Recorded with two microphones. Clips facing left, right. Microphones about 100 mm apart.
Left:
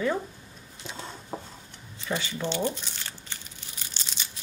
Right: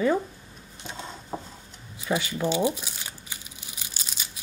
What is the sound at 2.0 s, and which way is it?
Crumpling, 10° right (ahead or behind).